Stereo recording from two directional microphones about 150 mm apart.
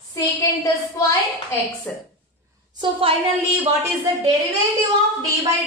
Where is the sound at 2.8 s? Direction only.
40° right (ahead or behind).